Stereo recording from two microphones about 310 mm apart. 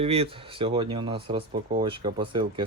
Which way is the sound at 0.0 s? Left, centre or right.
Centre.